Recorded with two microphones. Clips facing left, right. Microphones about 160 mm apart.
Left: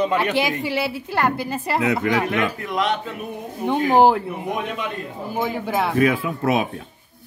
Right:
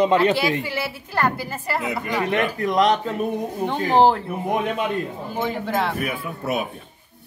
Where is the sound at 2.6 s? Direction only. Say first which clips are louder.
Right 4 dB; 40° right (ahead or behind).